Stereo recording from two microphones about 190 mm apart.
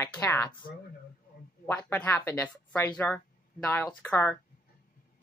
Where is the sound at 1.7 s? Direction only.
10° left (ahead or behind).